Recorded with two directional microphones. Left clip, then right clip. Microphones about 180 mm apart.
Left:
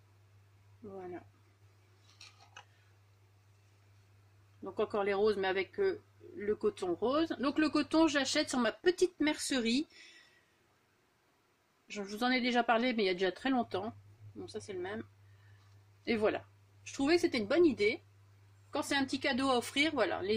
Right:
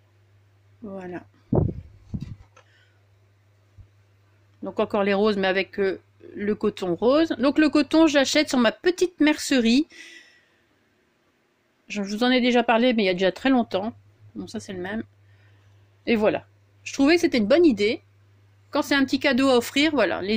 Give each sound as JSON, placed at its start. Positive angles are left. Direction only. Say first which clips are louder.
{"t": 0.9, "sound": "speech", "louder": "right 10 dB", "side_deg": -45}
{"t": 4.6, "sound": "speech", "louder": "right 10 dB", "side_deg": -40}
{"t": 11.9, "sound": "speech", "louder": "right 11 dB", "side_deg": -40}
{"t": 14.4, "sound": "speech", "louder": "right 8 dB", "side_deg": -50}
{"t": 16.0, "sound": "speech", "louder": "right 11 dB", "side_deg": -25}
{"t": 16.8, "sound": "speech", "louder": "right 11 dB", "side_deg": -45}